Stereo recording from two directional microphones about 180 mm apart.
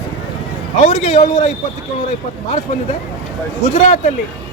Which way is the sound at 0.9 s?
40° left (ahead or behind).